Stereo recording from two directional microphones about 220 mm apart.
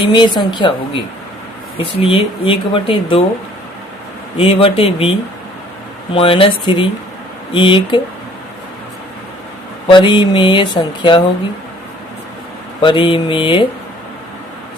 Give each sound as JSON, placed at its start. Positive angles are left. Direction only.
{"t": 0.0, "sound": "speech", "side_deg": 20}
{"t": 1.8, "sound": "speech", "side_deg": 25}
{"t": 4.4, "sound": "speech", "side_deg": 25}
{"t": 6.1, "sound": "speech", "side_deg": 25}
{"t": 9.8, "sound": "speech", "side_deg": 20}
{"t": 12.8, "sound": "speech", "side_deg": 20}